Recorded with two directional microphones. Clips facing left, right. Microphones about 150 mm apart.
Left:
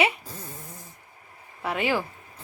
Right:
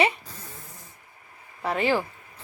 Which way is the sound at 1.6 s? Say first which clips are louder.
Right 2 dB; 5° left (ahead or behind).